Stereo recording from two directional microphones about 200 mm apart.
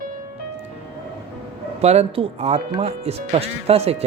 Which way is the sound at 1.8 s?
30° right (ahead or behind).